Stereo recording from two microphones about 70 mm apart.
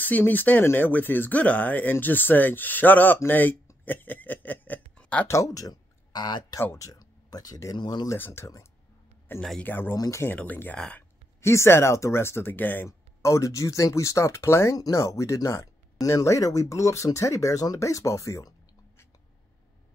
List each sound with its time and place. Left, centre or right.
0.0 s speech: left
4.9 s a sound: left
5.3 s speech: left
6.8 s speech: left
8.2 s speech: left
9.6 s speech: left
11.4 s speech: left
12.8 s speech: left